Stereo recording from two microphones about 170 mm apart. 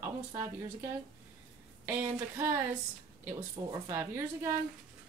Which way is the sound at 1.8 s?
15° right (ahead or behind).